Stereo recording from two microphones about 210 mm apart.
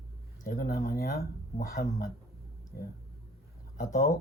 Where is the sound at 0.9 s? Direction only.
45° left (ahead or behind).